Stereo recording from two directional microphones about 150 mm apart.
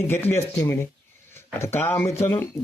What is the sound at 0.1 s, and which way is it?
Speech, 15° left (ahead or behind).